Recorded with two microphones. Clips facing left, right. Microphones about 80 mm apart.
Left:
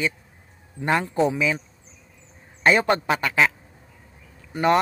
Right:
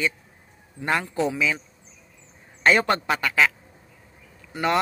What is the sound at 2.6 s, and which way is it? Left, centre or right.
Speech, centre.